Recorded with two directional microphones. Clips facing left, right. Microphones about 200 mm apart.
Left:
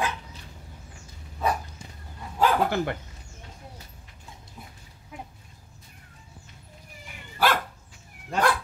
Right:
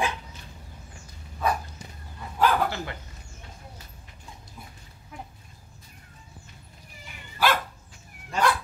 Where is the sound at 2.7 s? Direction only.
55° left (ahead or behind).